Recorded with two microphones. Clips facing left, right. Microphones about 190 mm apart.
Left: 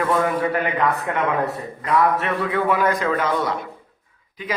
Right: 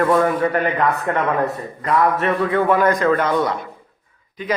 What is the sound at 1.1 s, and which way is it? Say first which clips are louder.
Speech: right 3 dB; 45° right (ahead or behind).